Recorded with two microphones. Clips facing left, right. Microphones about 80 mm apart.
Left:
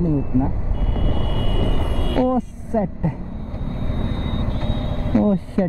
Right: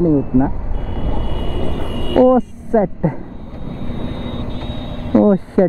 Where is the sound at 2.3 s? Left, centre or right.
Right.